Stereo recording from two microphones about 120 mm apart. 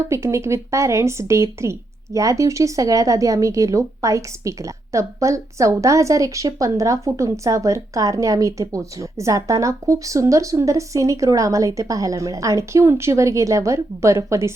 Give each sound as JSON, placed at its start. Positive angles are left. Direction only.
{"t": 0.1, "sound": "speech", "side_deg": -25}